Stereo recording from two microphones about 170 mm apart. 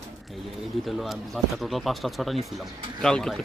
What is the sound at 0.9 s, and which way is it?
Speech, centre (ahead or behind).